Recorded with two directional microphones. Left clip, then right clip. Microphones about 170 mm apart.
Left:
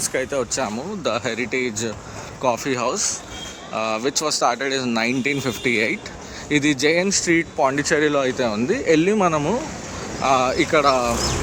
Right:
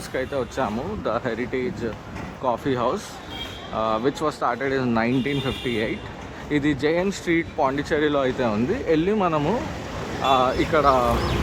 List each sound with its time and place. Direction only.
0.1 s speech: 15° left (ahead or behind)
7.1 s speech: 10° left (ahead or behind)
10.2 s speech: 25° left (ahead or behind)